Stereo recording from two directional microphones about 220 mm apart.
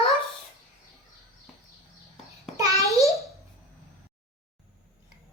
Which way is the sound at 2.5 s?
15° right (ahead or behind).